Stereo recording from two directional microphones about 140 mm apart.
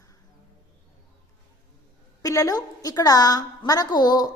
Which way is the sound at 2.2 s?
25° left (ahead or behind).